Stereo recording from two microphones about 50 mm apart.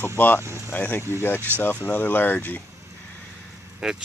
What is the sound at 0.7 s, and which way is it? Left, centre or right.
Speech, left.